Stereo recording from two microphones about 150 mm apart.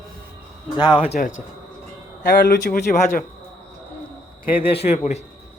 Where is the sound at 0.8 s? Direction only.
30° left (ahead or behind).